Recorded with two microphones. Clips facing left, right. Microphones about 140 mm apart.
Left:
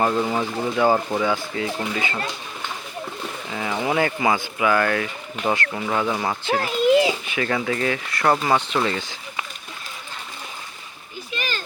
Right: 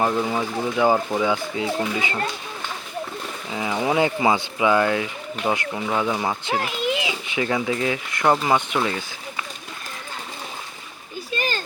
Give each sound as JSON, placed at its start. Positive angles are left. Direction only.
{"t": 0.0, "sound": "speech", "side_deg": -5}
{"t": 3.5, "sound": "speech", "side_deg": -10}
{"t": 6.4, "sound": "speech", "side_deg": -20}
{"t": 6.9, "sound": "children playing", "side_deg": 40}
{"t": 7.3, "sound": "speech", "side_deg": -15}
{"t": 11.3, "sound": "children playing", "side_deg": -35}